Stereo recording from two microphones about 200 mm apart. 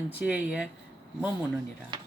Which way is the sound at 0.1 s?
5° right (ahead or behind).